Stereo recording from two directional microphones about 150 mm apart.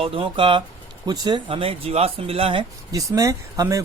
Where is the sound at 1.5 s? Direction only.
40° right (ahead or behind).